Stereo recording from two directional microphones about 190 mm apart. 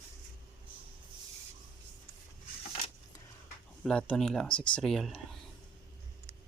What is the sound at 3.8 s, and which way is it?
Speech, 5° left (ahead or behind).